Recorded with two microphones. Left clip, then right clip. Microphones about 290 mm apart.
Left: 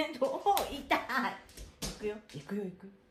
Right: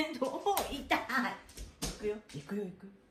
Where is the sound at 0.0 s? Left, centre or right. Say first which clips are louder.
Left 3 dB; left.